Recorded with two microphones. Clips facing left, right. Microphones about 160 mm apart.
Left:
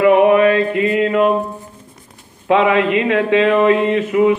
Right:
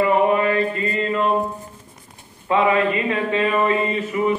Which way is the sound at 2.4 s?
90° left.